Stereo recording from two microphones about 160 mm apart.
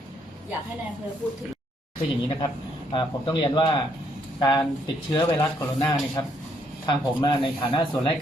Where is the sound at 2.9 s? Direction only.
30° left (ahead or behind).